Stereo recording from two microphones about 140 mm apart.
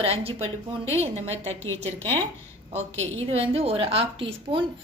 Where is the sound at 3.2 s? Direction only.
45° right (ahead or behind).